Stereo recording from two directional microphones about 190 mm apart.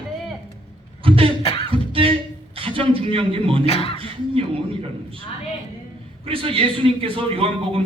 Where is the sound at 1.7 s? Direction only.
30° right (ahead or behind).